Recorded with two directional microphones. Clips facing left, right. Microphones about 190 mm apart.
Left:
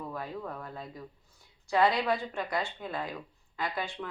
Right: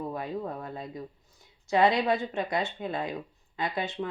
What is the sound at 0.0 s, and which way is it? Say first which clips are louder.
Speech: right 5 dB; 25° right (ahead or behind).